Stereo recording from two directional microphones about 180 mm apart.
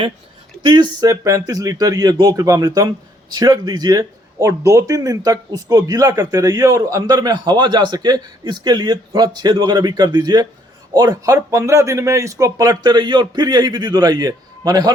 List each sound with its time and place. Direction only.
0.6 s a man's voice: 25° right (ahead or behind)